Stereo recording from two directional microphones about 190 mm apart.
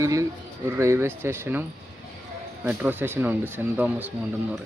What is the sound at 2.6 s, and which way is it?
Speech, 10° right (ahead or behind).